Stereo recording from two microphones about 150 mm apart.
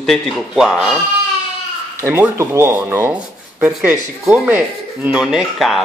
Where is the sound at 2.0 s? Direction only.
15° right (ahead or behind).